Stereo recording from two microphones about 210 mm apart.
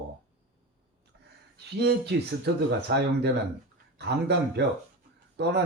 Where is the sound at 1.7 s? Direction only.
55° right (ahead or behind).